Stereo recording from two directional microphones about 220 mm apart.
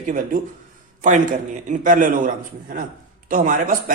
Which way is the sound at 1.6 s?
35° right (ahead or behind).